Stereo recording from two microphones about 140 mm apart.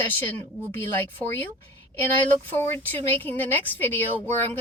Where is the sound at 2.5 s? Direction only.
15° left (ahead or behind).